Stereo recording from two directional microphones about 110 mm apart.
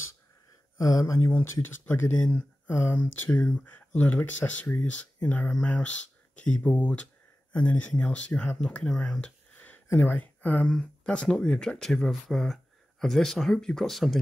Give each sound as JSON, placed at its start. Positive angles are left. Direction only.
{"t": 0.7, "sound": "speech", "side_deg": 30}
{"t": 1.3, "sound": "speech", "side_deg": 20}
{"t": 3.3, "sound": "speech", "side_deg": 10}